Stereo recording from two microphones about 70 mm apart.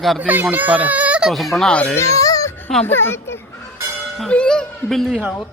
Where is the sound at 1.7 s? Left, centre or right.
Centre.